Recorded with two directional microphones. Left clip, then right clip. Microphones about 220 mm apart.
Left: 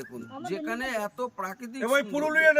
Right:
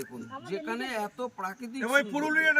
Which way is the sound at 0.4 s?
15° left (ahead or behind).